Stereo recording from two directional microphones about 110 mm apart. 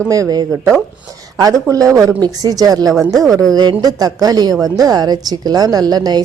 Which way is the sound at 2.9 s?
Centre (ahead or behind).